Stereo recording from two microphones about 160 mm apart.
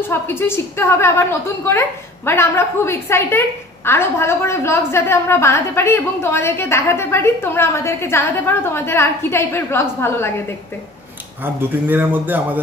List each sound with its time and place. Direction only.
0.1 s a woman's voice: 15° left (ahead or behind)
11.4 s a man's voice: 10° right (ahead or behind)